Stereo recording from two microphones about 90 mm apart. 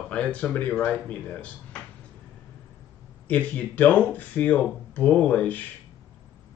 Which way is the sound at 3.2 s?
15° left (ahead or behind).